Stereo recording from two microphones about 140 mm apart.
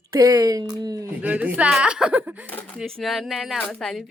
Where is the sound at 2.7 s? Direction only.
Centre (ahead or behind).